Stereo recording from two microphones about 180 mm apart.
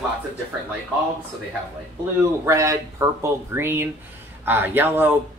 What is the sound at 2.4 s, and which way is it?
Speech, 15° right (ahead or behind).